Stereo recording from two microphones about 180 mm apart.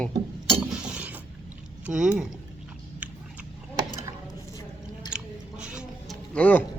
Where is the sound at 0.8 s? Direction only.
5° right (ahead or behind).